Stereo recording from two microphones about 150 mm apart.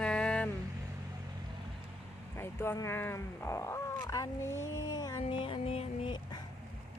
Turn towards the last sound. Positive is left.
turn(degrees=40)  # may be behind; listen again after turning